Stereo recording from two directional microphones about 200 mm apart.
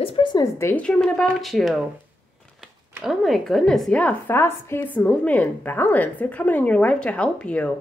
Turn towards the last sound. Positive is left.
turn(degrees=5)  # may be behind; listen again after turning